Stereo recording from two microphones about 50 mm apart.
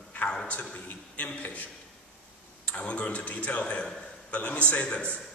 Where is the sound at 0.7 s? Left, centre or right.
Left.